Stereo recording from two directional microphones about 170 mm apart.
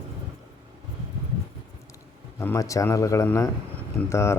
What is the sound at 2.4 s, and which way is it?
Speech, 15° left (ahead or behind).